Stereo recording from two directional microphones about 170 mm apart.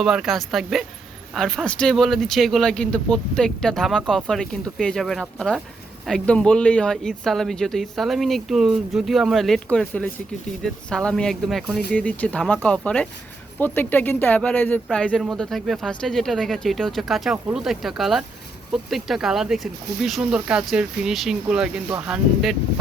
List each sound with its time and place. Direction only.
0.0 s speech: centre (ahead or behind)
21.8 s speech: 15° right (ahead or behind)
22.1 s speech: centre (ahead or behind)